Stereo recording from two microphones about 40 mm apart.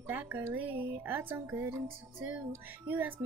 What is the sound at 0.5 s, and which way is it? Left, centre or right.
Music, right.